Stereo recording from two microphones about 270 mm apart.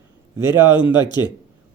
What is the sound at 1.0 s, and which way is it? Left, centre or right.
Speech, centre.